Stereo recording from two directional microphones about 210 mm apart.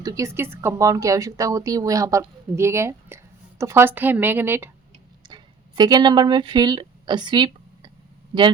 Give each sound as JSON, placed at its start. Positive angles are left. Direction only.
{"t": 0.0, "sound": "a woman's voice", "side_deg": -15}